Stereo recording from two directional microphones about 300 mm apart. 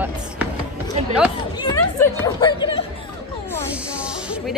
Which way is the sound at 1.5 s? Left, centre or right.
Centre.